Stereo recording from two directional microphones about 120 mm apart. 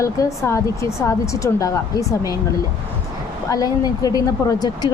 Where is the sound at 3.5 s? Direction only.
30° left (ahead or behind).